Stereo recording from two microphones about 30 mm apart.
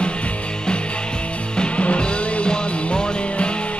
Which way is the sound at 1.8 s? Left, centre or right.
Left.